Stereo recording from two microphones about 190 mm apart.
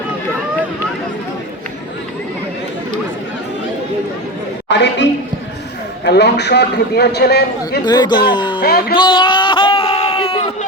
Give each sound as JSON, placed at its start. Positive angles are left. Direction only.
{"t": 4.7, "sound": "a woman's voice", "side_deg": 70}
{"t": 6.1, "sound": "a man's voice", "side_deg": 60}
{"t": 7.9, "sound": "speech", "side_deg": 20}
{"t": 8.6, "sound": "speech", "side_deg": 55}
{"t": 9.0, "sound": "a sound", "side_deg": 25}